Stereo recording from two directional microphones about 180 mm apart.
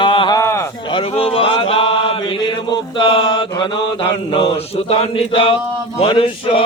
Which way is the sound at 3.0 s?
30° left (ahead or behind).